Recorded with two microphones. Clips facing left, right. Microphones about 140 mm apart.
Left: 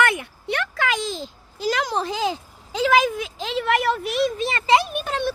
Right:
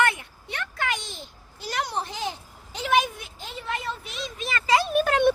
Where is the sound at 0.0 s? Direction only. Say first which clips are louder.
Left 3 dB; 90° left; by 4.3 s 65° left (ahead or behind).